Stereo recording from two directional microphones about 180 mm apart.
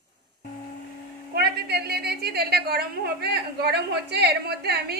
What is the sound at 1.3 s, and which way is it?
A woman's voice, 65° right (ahead or behind).